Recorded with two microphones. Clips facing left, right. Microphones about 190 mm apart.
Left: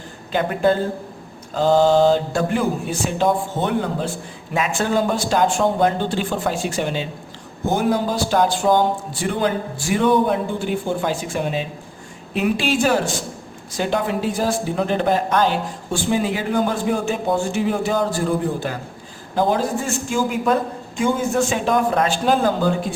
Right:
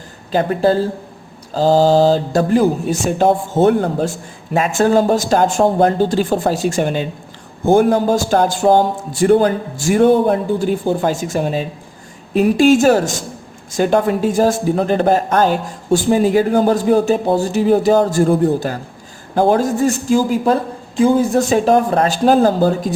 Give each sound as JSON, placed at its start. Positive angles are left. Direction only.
{"t": 0.3, "sound": "a man's voice", "side_deg": -35}